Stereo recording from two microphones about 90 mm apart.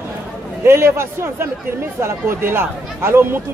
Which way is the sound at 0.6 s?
30° right (ahead or behind).